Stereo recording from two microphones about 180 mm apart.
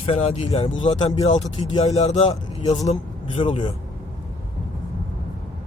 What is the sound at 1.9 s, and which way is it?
Speech, 35° left (ahead or behind).